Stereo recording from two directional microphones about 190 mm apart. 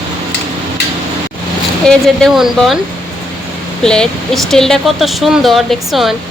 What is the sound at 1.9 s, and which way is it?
Speech, centre (ahead or behind).